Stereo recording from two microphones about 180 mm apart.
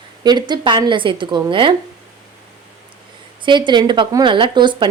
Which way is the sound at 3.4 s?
25° right (ahead or behind).